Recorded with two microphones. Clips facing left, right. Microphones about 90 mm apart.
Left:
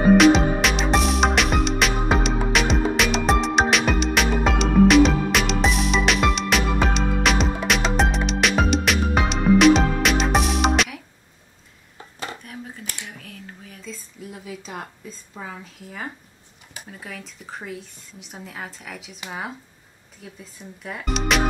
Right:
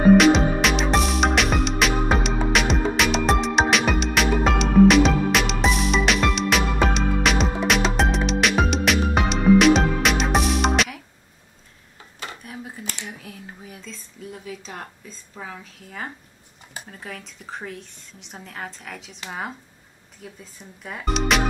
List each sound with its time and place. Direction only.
0.2 s music: centre (ahead or behind)
12.4 s dishes: 5° right (ahead or behind)
13.8 s a sound: 5° left (ahead or behind)
17.0 s speech: centre (ahead or behind)